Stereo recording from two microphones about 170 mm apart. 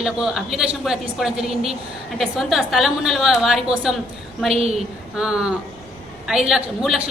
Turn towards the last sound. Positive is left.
turn(degrees=0)  # may be behind; listen again after turning